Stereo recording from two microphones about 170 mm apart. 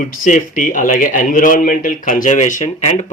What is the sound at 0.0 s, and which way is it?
Speech, 50° left (ahead or behind).